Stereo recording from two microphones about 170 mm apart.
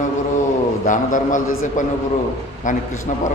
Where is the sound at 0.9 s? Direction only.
50° left (ahead or behind).